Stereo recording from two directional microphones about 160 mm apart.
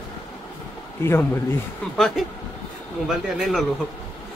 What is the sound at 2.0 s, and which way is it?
Speech, centre (ahead or behind).